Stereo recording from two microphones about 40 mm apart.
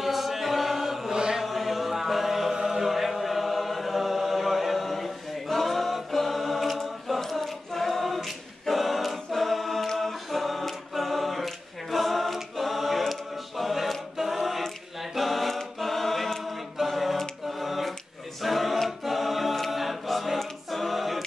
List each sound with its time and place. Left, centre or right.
0.0 s chant: centre
1.1 s chant: right
1.4 s chant: centre
15.1 s choir: centre
16.8 s a sound: centre
18.4 s choir: centre